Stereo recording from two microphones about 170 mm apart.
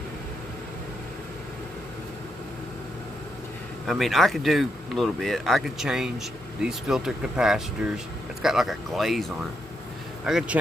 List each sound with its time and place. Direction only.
3.8 s speech: centre (ahead or behind)
10.2 s speech: 5° right (ahead or behind)